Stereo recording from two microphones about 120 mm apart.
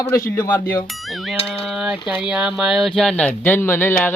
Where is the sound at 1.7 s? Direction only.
5° right (ahead or behind); by 4.1 s 15° left (ahead or behind).